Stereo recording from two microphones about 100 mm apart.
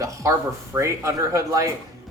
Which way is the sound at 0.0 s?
30° right (ahead or behind).